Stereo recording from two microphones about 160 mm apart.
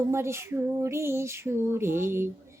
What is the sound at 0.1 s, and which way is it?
Female singing, 15° right (ahead or behind).